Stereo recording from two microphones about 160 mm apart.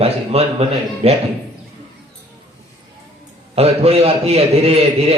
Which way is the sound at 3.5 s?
40° right (ahead or behind).